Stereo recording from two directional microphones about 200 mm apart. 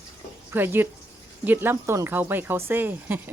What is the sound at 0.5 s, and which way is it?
Speech, 10° right (ahead or behind).